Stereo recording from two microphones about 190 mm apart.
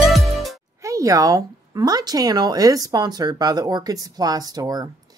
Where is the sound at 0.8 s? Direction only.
15° right (ahead or behind).